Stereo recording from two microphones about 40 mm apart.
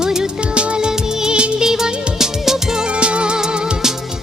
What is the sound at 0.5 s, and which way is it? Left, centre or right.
Music of bollywood, right.